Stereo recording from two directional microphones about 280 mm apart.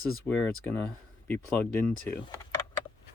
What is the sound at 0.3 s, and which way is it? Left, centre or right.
Speech, centre.